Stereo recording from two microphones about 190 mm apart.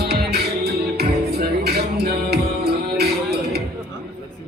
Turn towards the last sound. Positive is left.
turn(degrees=-55)  # may be behind; listen again after turning